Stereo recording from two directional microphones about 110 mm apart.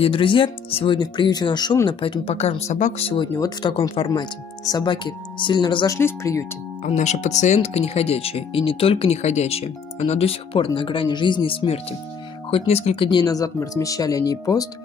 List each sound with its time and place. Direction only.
0.0 s speech: 50° left (ahead or behind)
0.9 s speech: 45° left (ahead or behind)
1.9 s speech: 50° left (ahead or behind)
2.3 s speech: 80° left
3.3 s speech: 35° left (ahead or behind)
5.9 s speech: 25° left (ahead or behind)
6.9 s speech: 90° left; by 13.1 s 70° left (ahead or behind)
13.1 s speech: 35° left (ahead or behind)